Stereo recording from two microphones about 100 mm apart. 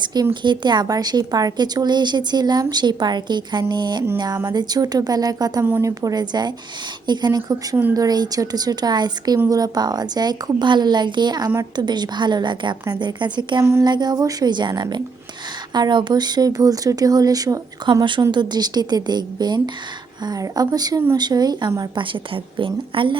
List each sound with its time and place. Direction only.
0.0 s a woman's voice: 45° right (ahead or behind)
5.6 s a woman's voice: 20° right (ahead or behind)
5.9 s a woman's voice: 35° right (ahead or behind)
18.2 s a woman's voice: 45° right (ahead or behind)
21.9 s a woman's voice: 55° right (ahead or behind)